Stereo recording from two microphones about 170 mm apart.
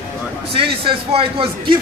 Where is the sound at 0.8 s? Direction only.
30° right (ahead or behind).